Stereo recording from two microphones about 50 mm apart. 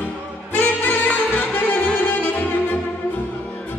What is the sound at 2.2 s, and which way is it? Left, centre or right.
Saxophone, left.